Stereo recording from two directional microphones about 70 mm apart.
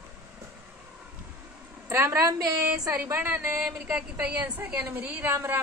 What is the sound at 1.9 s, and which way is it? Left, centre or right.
A woman's voice, right.